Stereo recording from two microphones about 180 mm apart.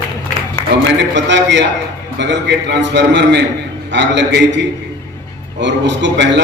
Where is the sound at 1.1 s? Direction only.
75° right (ahead or behind).